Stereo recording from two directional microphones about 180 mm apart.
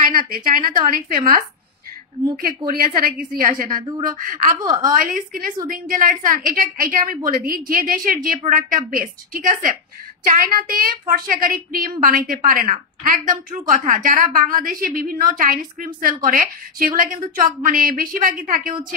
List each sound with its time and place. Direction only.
0.0 s a woman's voice: 50° right (ahead or behind)
4.6 s a woman's voice: 20° right (ahead or behind)
4.9 s a woman's voice: 50° right (ahead or behind)